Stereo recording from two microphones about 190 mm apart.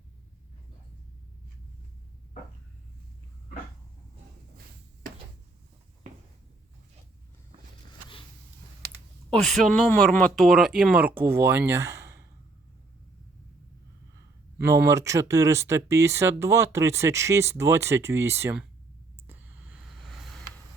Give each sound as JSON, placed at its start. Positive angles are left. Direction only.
{"t": 9.3, "sound": "speech", "side_deg": 0}
{"t": 14.6, "sound": "speech", "side_deg": -15}
{"t": 19.3, "sound": "a sound", "side_deg": -5}